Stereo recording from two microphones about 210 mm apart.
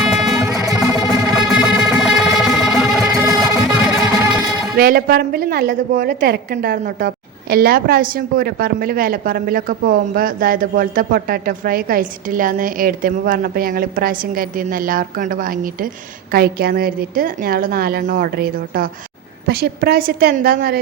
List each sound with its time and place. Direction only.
0.0 s music: centre (ahead or behind)
0.4 s music: 15° right (ahead or behind)
1.2 s music: centre (ahead or behind)
4.8 s a woman's voice: 45° right (ahead or behind)